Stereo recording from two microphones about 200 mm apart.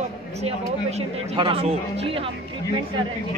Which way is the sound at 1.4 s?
25° right (ahead or behind).